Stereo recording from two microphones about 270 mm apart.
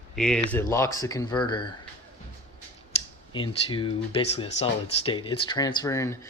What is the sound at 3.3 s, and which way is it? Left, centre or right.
Speech, centre.